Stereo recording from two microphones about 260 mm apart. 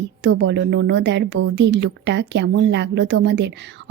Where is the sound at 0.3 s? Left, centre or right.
Right.